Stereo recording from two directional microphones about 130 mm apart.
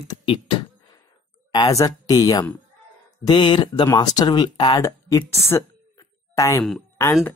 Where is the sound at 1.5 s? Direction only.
30° left (ahead or behind).